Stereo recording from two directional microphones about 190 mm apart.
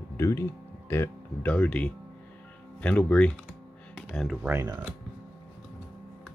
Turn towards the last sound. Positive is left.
turn(degrees=-10)  # may be behind; listen again after turning